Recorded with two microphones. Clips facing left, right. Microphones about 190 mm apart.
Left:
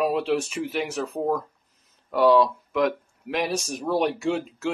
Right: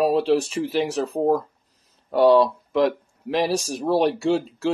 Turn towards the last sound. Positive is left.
turn(degrees=-35)  # may be behind; listen again after turning